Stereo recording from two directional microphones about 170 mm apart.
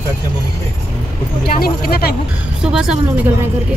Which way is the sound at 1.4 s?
60° left (ahead or behind).